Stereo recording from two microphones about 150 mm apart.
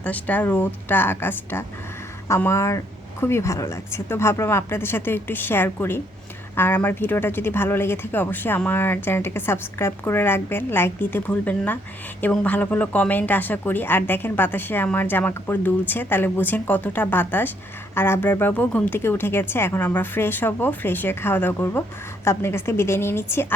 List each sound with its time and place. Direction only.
0.0 s speech: 10° left (ahead or behind)